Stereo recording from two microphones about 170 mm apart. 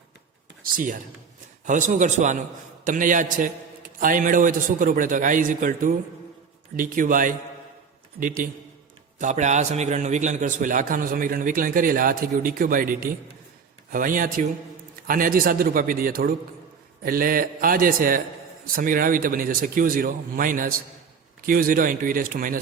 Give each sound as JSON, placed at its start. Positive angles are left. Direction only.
{"t": 0.6, "sound": "a man's voice", "side_deg": -55}